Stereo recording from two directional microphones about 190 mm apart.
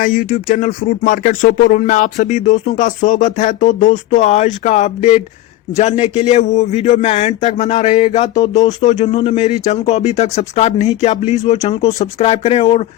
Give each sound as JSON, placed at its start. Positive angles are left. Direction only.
{"t": 0.0, "sound": "a man's voice", "side_deg": 45}